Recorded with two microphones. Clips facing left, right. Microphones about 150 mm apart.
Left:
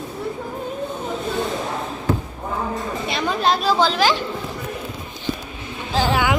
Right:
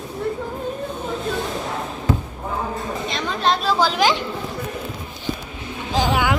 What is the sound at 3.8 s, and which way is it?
Chatter, 15° right (ahead or behind).